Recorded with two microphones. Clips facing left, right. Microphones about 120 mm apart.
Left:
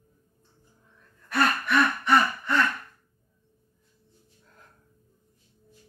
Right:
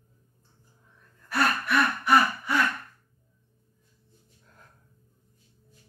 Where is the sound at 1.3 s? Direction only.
5° right (ahead or behind).